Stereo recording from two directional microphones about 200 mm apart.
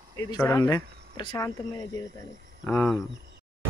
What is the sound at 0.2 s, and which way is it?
Speech, 15° left (ahead or behind).